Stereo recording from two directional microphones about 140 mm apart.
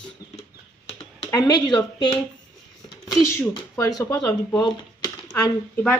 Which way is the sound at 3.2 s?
20° left (ahead or behind).